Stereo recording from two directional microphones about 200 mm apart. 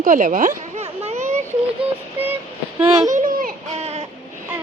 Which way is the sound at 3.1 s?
40° right (ahead or behind).